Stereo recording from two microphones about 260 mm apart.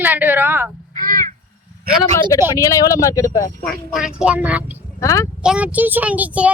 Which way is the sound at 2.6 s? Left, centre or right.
Centre.